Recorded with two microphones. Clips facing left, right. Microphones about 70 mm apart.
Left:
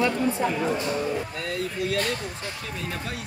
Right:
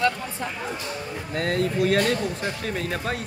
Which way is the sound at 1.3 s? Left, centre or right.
Right.